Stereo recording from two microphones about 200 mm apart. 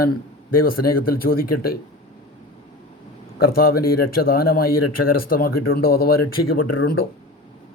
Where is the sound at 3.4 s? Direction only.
50° left (ahead or behind).